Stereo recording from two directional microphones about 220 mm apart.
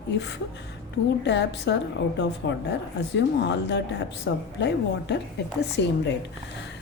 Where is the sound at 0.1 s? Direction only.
55° left (ahead or behind).